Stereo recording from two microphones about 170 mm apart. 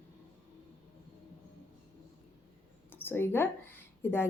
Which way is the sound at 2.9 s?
10° left (ahead or behind).